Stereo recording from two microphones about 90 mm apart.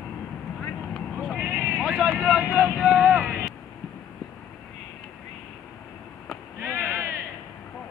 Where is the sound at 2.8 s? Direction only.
15° right (ahead or behind).